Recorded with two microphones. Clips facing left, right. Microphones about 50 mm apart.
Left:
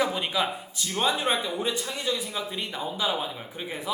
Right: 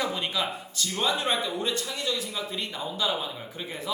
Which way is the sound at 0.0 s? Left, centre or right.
Centre.